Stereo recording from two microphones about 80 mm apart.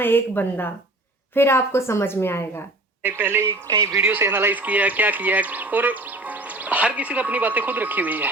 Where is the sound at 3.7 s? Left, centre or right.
Right.